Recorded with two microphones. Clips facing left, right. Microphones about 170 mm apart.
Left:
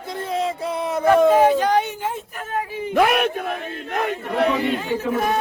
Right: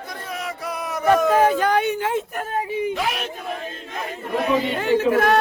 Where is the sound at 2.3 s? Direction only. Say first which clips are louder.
Right 5 dB; 45° right (ahead or behind).